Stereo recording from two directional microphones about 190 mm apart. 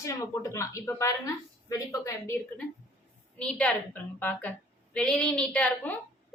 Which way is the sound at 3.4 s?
5° left (ahead or behind).